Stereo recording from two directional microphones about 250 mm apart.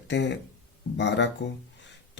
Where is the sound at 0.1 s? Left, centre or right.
Left.